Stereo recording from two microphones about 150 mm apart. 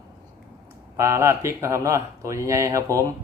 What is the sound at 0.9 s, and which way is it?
Speech, 20° right (ahead or behind).